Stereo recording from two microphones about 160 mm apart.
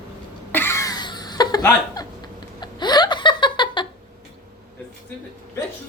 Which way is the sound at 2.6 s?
25° left (ahead or behind).